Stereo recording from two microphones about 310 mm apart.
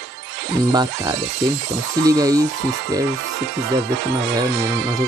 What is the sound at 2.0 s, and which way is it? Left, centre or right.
Speech, centre.